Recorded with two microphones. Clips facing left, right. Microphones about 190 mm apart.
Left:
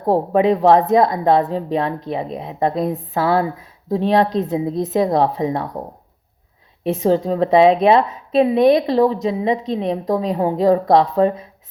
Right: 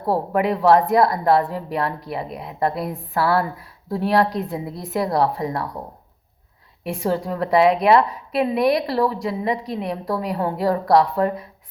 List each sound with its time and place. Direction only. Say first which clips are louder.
0.1 s a woman's voice: left 5 dB; 20° left (ahead or behind)
6.8 s a woman's voice: left 6 dB; 20° left (ahead or behind)